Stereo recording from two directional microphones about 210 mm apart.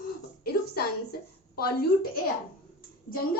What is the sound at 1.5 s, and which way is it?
Speech, 45° left (ahead or behind).